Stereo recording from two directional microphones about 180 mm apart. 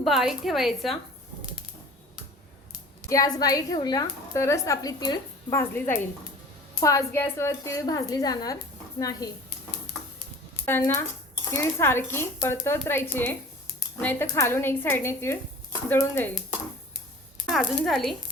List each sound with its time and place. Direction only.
0.0 s a woman's voice: centre (ahead or behind)
3.1 s a woman's voice: 20° left (ahead or behind)
10.7 s a woman's voice: 10° left (ahead or behind)
17.4 s speech: centre (ahead or behind)